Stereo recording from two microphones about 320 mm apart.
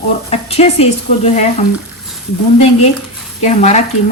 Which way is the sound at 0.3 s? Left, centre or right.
Centre.